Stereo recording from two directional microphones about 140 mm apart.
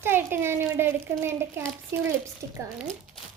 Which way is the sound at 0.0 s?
15° right (ahead or behind).